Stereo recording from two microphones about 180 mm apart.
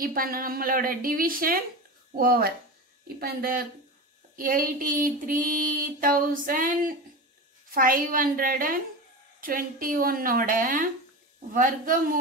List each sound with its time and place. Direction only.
0.0 s female singing: 55° right (ahead or behind)
2.1 s speech: 55° right (ahead or behind)
4.4 s female singing: 50° right (ahead or behind)